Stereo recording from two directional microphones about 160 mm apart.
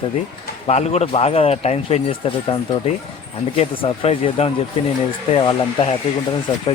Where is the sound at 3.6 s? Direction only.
35° left (ahead or behind).